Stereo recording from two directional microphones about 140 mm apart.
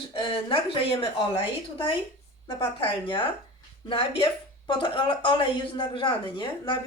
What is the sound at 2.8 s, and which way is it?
Speech, 40° left (ahead or behind).